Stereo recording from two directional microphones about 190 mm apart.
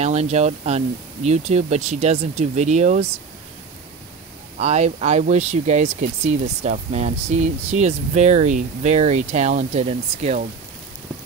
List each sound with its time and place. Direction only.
0.0 s speech: 35° right (ahead or behind)
4.6 s speech: 35° right (ahead or behind)